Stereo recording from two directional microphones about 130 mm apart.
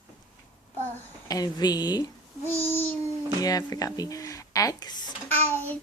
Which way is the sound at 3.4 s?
30° left (ahead or behind).